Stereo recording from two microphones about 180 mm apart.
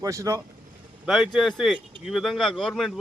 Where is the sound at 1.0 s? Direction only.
Centre (ahead or behind).